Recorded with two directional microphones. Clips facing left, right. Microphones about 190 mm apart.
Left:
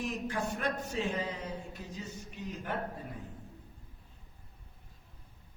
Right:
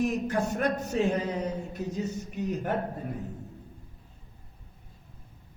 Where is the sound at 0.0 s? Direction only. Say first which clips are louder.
Right 8 dB; 45° right (ahead or behind).